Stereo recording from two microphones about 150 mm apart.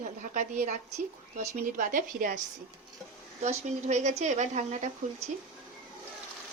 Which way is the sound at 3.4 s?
50° right (ahead or behind).